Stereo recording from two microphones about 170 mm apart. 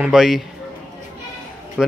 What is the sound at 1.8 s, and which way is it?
Speech, centre (ahead or behind).